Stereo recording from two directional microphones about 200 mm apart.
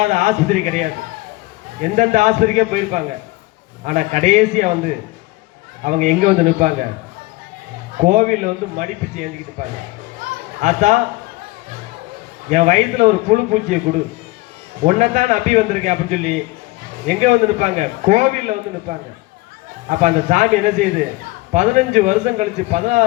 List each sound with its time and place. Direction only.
0.0 s a man's voice: 35° right (ahead or behind)
7.9 s a man's voice: 40° right (ahead or behind)
12.5 s a man's voice: 40° right (ahead or behind)